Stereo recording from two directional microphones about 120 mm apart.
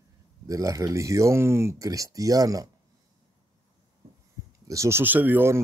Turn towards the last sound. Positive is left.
turn(degrees=-15)  # may be behind; listen again after turning